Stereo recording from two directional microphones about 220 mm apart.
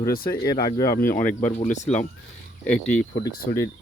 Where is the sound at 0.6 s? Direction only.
15° left (ahead or behind).